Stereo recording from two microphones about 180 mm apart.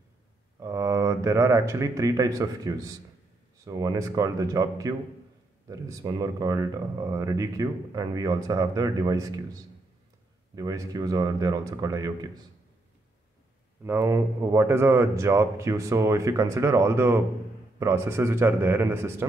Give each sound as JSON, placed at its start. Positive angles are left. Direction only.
{"t": 0.6, "sound": "speech", "side_deg": -15}
{"t": 13.8, "sound": "speech", "side_deg": -15}